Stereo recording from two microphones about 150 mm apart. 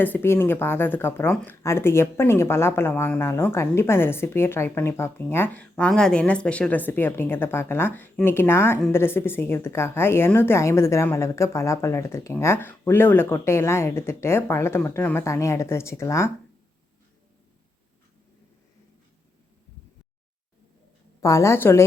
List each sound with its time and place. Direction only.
0.0 s a woman's voice: 15° left (ahead or behind)
5.7 s a woman's voice: 5° left (ahead or behind); by 16.3 s 20° left (ahead or behind)
21.2 s a woman's voice: 20° left (ahead or behind)